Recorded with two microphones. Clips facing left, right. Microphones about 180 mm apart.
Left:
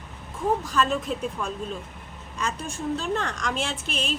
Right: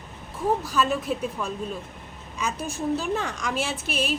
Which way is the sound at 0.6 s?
5° right (ahead or behind).